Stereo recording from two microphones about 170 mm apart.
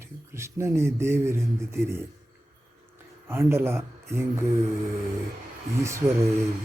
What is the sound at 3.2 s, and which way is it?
Speech, 15° right (ahead or behind).